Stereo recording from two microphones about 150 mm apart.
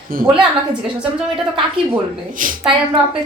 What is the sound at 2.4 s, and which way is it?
Speech, 60° right (ahead or behind).